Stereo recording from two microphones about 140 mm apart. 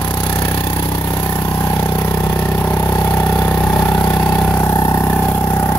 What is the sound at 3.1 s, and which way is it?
Vehicle, 15° left (ahead or behind).